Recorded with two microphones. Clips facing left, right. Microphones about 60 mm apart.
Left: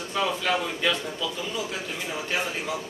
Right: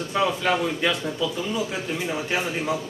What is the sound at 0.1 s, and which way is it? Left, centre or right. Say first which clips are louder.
A man's voice: right 3 dB; centre.